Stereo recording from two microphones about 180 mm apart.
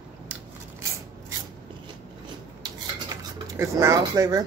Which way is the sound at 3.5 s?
15° right (ahead or behind).